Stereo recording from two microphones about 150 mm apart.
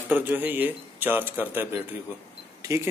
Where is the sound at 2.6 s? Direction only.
20° right (ahead or behind).